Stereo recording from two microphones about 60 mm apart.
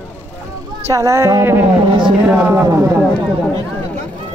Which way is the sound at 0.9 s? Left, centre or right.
Right.